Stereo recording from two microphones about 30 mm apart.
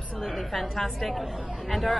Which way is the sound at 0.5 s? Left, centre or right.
Centre.